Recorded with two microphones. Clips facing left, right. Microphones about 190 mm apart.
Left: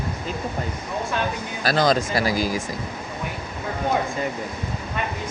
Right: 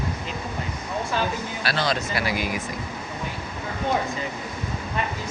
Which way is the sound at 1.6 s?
40° left (ahead or behind).